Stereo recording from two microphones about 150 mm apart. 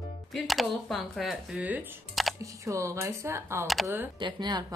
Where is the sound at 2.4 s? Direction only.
20° right (ahead or behind).